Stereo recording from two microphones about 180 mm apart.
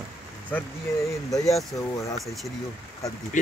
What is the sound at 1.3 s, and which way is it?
Speech, 20° left (ahead or behind).